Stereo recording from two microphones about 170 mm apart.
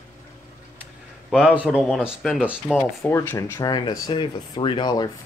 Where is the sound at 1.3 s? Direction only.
5° right (ahead or behind).